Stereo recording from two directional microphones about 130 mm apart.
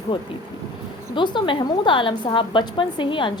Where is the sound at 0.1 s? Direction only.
40° left (ahead or behind).